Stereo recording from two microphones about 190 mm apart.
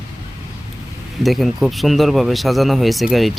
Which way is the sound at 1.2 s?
Centre (ahead or behind).